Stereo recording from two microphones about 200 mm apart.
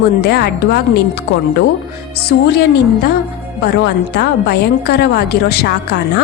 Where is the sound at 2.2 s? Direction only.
55° left (ahead or behind).